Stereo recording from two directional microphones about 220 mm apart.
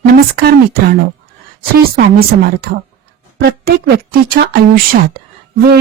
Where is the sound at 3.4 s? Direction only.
45° right (ahead or behind).